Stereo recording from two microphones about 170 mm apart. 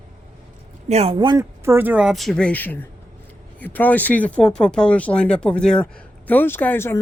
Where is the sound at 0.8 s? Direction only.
40° right (ahead or behind).